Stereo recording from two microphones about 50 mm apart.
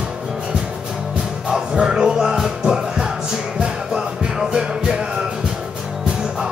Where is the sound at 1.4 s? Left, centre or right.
Centre.